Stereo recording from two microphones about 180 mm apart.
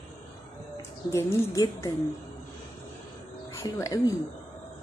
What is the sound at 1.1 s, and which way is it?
Speech, 15° left (ahead or behind).